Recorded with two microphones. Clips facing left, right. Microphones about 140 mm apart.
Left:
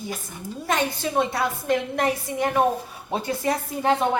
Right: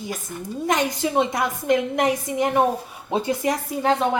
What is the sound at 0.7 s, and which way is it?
A woman's voice, 15° right (ahead or behind).